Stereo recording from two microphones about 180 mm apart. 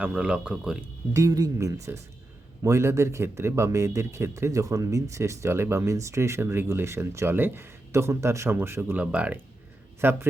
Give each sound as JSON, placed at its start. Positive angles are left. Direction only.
{"t": 0.0, "sound": "speech", "side_deg": -5}
{"t": 1.1, "sound": "a man's voice", "side_deg": -20}